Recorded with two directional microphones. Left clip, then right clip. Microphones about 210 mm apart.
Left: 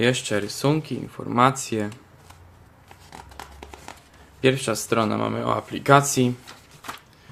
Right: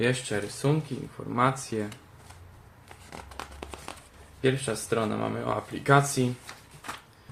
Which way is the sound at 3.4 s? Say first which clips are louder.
Right 2 dB; 10° left (ahead or behind).